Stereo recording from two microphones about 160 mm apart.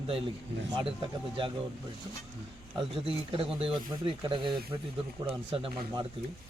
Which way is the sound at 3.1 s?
35° right (ahead or behind).